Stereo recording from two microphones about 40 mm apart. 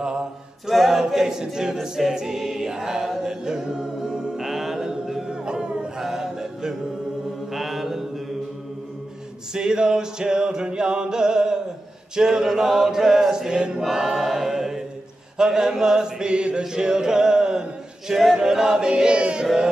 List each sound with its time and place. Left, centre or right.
0.0 s a capella: centre
0.7 s a capella: centre
1.4 s chant: centre
2.1 s choir: centre
3.3 s music: centre
4.5 s chant: centre
5.3 s music: right
6.0 s music: centre
7.5 s mantra: centre
9.5 s a sound: centre
12.2 s chant: centre
13.8 s choir: centre
15.3 s chant: centre
15.8 s a sound: centre